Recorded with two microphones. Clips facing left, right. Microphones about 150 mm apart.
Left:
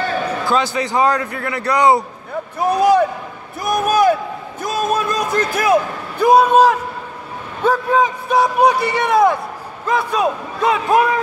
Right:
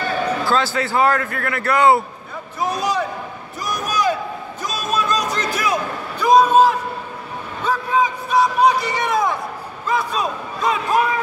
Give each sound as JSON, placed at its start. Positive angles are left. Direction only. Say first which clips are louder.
{"t": 0.5, "sound": "a man's voice", "louder": "left 1 dB", "side_deg": 15}
{"t": 2.6, "sound": "a man's voice", "louder": "left 8 dB", "side_deg": 60}
{"t": 3.6, "sound": "a sound", "louder": "left 7 dB", "side_deg": 55}
{"t": 7.6, "sound": "a man's voice", "louder": "left 4 dB", "side_deg": 60}